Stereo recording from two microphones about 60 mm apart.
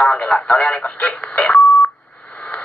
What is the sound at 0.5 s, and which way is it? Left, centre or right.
Speech, centre.